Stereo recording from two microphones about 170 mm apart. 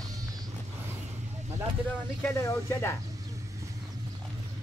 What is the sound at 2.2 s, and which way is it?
Speech, 15° left (ahead or behind).